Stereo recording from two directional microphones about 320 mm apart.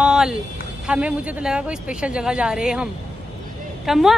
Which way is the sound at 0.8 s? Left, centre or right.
Centre.